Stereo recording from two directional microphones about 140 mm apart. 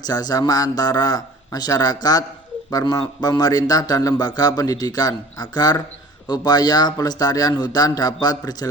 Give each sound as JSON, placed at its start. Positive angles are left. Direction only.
{"t": 0.0, "sound": "a man's voice", "side_deg": 30}